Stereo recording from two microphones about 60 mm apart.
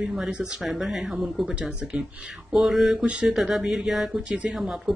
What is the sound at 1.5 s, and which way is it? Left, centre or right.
Speech, centre.